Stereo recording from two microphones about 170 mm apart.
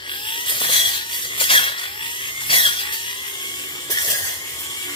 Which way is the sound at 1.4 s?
30° left (ahead or behind).